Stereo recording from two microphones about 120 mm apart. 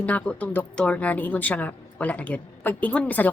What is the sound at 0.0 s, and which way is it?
A woman's voice, 10° left (ahead or behind).